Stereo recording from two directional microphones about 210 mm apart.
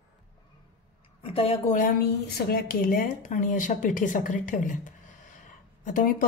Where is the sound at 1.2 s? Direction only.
25° left (ahead or behind).